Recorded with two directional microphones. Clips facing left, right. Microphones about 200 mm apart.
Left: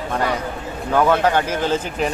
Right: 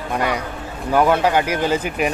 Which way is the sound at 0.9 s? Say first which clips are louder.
Right 1 dB; 10° right (ahead or behind).